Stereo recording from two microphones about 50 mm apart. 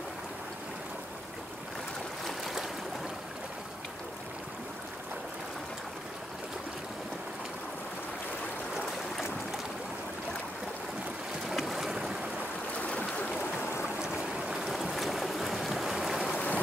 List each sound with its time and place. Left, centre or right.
2.2 s stream: centre
8.7 s stream: centre
11.4 s boat: centre
12.7 s boat: left
14.0 s boat: centre
14.6 s boat: centre
16.3 s rain: left